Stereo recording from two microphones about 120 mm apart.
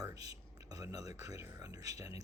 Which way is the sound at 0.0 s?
30° right (ahead or behind).